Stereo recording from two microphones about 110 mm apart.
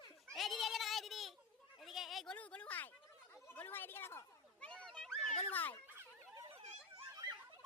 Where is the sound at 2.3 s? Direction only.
10° left (ahead or behind).